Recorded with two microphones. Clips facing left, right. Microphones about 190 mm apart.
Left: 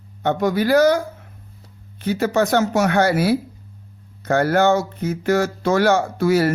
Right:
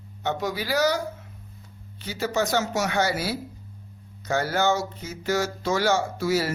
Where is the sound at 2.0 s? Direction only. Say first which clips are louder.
Left 7 dB; 60° left (ahead or behind).